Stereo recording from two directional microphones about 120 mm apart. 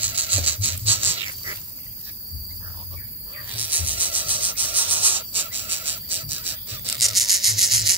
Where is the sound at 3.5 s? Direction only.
15° right (ahead or behind).